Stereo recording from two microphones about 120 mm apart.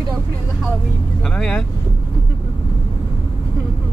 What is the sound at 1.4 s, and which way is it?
Speech, 5° left (ahead or behind).